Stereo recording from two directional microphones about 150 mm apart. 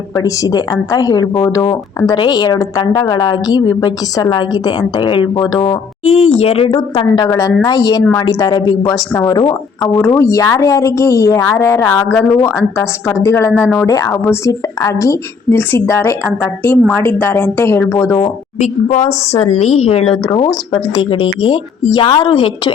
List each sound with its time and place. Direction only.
0.2 s a woman's voice: 25° left (ahead or behind)
6.1 s a woman's voice: 40° left (ahead or behind)
7.3 s a woman's voice: 25° left (ahead or behind)
9.8 s a woman's voice: 15° left (ahead or behind)
18.6 s a woman's voice: 50° left (ahead or behind); by 22.7 s 35° left (ahead or behind)